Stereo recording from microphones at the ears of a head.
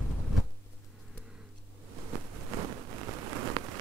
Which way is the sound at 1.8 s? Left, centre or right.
Right.